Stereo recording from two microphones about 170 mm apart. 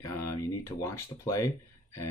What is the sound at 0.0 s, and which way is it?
Speech, 20° left (ahead or behind).